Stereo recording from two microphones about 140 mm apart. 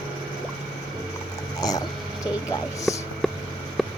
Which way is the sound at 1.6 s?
25° left (ahead or behind).